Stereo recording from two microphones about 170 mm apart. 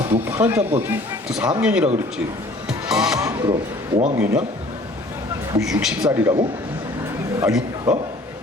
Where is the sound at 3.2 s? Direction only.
25° right (ahead or behind).